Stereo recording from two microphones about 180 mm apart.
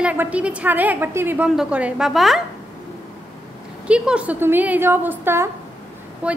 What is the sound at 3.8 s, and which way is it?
A woman's voice, 5° right (ahead or behind).